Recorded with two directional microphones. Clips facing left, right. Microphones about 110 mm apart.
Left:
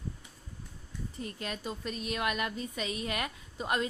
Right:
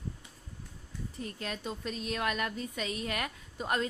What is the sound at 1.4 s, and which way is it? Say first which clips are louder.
A woman's voice: even; 5° left (ahead or behind).